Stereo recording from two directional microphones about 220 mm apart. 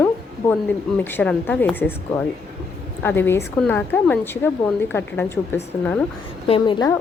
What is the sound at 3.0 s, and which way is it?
A woman's voice, 10° left (ahead or behind).